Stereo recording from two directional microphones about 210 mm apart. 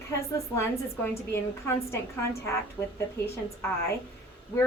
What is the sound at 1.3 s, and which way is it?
Speech, 10° left (ahead or behind).